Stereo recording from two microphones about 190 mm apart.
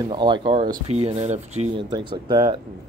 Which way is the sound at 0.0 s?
25° right (ahead or behind).